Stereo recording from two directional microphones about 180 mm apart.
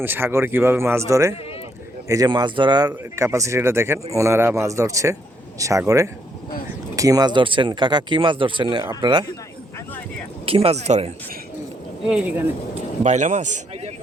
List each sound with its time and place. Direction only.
0.0 s speech: 10° right (ahead or behind)
10.4 s speech: 30° right (ahead or behind)
12.0 s speech: 5° right (ahead or behind)
13.0 s a man's voice: 40° right (ahead or behind)